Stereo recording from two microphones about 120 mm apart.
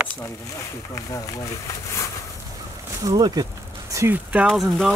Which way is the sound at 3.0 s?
35° right (ahead or behind).